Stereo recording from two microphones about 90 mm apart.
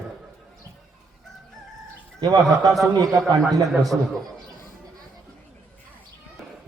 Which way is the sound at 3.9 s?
15° right (ahead or behind).